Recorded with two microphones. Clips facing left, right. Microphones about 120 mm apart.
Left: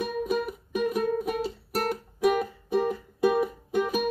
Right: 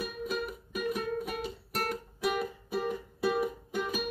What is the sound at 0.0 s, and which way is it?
Music, 45° left (ahead or behind).